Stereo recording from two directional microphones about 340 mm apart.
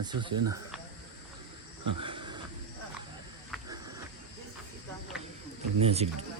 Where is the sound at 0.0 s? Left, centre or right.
Centre.